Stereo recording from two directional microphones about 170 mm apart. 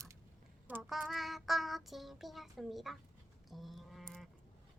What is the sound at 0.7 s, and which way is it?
Child singing, 5° right (ahead or behind).